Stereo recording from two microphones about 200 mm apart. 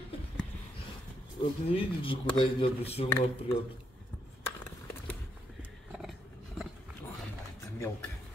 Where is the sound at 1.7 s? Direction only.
25° left (ahead or behind).